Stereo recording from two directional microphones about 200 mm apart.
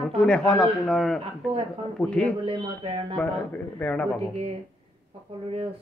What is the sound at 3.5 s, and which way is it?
Speech, 5° left (ahead or behind).